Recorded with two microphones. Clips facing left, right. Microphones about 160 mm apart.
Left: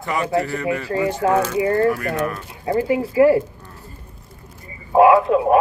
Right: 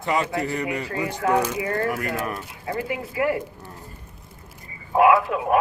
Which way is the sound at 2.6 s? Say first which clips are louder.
Left 10 dB; 30° left (ahead or behind).